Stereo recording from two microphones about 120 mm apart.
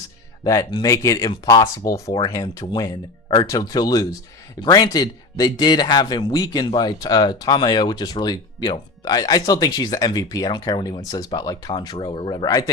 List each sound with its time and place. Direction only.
0.4 s a man's voice: 30° left (ahead or behind)